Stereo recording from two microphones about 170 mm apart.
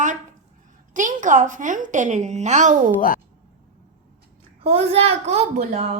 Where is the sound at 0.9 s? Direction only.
50° right (ahead or behind).